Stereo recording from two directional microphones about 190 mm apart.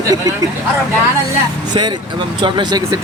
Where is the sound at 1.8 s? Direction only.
25° right (ahead or behind).